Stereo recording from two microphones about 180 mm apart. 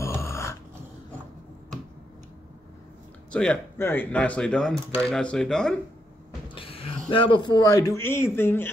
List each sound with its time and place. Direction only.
0.0 s a sound: 15° left (ahead or behind)
3.3 s speech: 5° left (ahead or behind)
6.5 s speech: 30° left (ahead or behind); by 8.7 s 10° left (ahead or behind)